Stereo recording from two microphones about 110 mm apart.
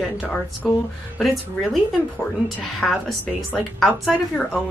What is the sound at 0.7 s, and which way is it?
Speech, 5° left (ahead or behind).